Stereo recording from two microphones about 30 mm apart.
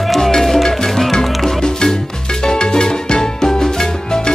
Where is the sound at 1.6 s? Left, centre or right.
Left.